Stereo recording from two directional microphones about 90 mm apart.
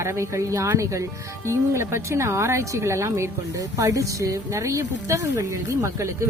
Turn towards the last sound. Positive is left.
turn(degrees=-35)  # may be behind; listen again after turning